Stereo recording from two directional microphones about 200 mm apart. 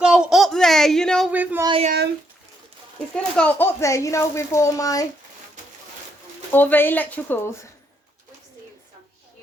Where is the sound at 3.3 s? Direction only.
10° left (ahead or behind).